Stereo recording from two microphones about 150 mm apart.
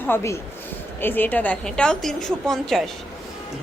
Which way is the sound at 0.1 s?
20° left (ahead or behind).